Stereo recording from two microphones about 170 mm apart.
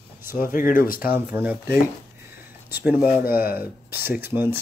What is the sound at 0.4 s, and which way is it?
Speech, 55° left (ahead or behind).